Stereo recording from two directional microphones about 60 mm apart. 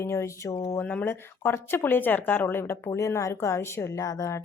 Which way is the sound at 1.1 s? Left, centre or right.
Left.